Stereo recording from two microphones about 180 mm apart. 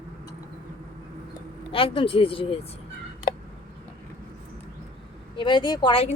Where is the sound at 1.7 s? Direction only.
30° left (ahead or behind).